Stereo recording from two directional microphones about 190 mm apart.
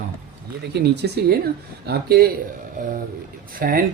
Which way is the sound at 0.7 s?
60° right (ahead or behind).